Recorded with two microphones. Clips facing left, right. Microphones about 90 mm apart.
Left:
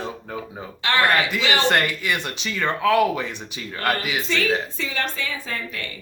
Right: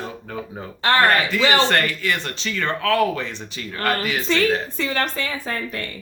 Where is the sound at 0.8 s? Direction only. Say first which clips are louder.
Right 3 dB; 40° right (ahead or behind).